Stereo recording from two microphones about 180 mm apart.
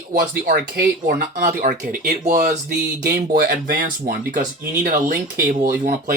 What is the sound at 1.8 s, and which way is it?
Speech, 50° right (ahead or behind).